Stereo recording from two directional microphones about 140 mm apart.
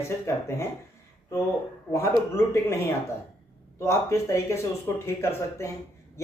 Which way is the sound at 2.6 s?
15° left (ahead or behind).